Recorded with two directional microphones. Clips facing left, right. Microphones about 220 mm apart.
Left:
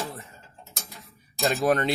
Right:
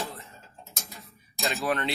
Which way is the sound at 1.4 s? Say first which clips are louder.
Left 6 dB; 45° left (ahead or behind).